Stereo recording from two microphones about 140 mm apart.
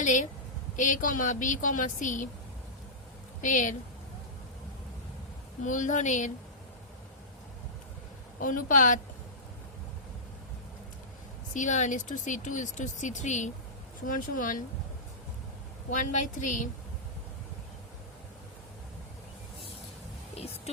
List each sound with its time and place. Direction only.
0.0 s a woman's voice: 65° left (ahead or behind)
3.4 s speech: 65° left (ahead or behind)
5.6 s speech: 65° left (ahead or behind)
8.4 s a woman's voice: 75° left (ahead or behind)
11.5 s speech: 60° left (ahead or behind)
14.1 s a woman's voice: 75° left (ahead or behind)
15.9 s speech: 65° left (ahead or behind)